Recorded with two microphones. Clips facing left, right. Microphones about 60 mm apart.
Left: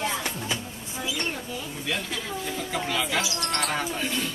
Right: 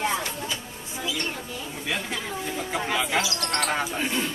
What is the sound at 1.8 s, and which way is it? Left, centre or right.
Speech, centre.